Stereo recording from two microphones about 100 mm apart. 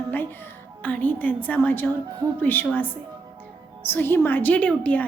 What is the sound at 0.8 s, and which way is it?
A woman's voice, 15° left (ahead or behind).